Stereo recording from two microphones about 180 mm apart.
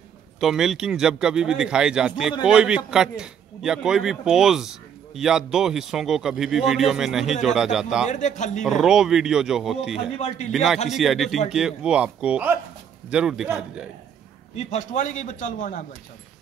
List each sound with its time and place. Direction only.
0.4 s a man's voice: centre (ahead or behind)
8.1 s speech: 40° left (ahead or behind)
8.6 s a man's voice: 5° right (ahead or behind)
10.1 s speech: 35° left (ahead or behind)
10.5 s a man's voice: centre (ahead or behind)
14.5 s a man's voice: 40° left (ahead or behind)